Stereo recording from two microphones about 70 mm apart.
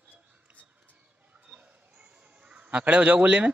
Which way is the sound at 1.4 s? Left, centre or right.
Centre.